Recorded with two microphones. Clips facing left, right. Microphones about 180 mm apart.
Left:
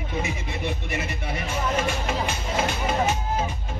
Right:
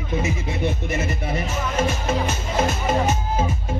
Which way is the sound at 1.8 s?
40° right (ahead or behind).